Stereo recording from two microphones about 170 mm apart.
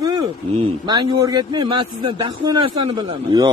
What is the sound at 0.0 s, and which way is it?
A man's voice, 25° right (ahead or behind).